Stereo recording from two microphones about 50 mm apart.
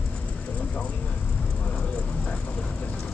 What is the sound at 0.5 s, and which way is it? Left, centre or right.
Vehicle, left.